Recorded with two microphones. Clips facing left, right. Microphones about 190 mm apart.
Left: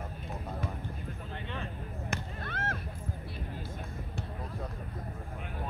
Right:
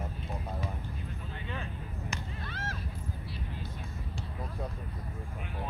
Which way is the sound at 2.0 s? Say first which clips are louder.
Left 3 dB; 55° left (ahead or behind).